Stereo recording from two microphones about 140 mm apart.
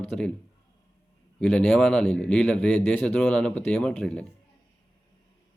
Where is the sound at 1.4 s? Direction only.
5° left (ahead or behind).